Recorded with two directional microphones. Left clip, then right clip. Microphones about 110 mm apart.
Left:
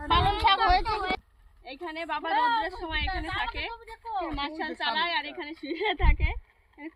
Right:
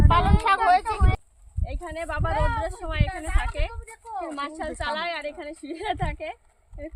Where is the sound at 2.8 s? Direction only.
40° right (ahead or behind).